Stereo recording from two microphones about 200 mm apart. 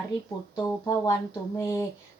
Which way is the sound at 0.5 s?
15° left (ahead or behind).